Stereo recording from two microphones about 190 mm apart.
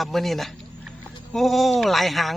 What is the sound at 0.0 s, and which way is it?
Speech, centre (ahead or behind).